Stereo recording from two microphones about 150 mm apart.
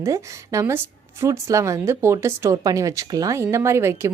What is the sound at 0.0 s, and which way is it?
A woman's voice, 20° right (ahead or behind).